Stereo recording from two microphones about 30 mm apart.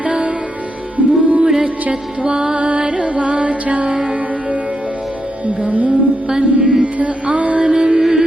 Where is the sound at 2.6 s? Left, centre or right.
Right.